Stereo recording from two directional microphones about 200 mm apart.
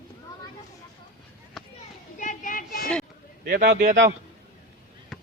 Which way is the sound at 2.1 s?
40° left (ahead or behind).